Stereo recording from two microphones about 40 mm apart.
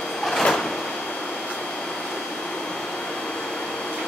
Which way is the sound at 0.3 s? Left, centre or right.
Centre.